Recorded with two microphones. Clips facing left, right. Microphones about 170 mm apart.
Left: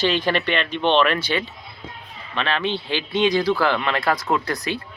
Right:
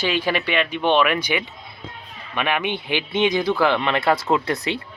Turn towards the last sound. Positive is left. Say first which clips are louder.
# right 2 dB
turn(degrees=-25)  # may be behind; listen again after turning